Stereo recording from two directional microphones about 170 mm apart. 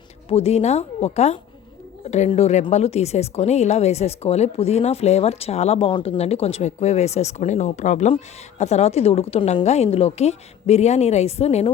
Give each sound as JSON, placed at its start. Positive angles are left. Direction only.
{"t": 0.3, "sound": "a woman's voice", "side_deg": 35}